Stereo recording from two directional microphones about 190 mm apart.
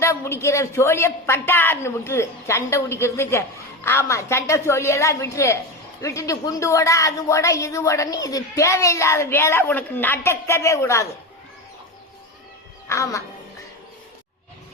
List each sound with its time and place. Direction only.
0.0 s a woman's voice: 15° left (ahead or behind)
12.9 s a woman's voice: 15° left (ahead or behind)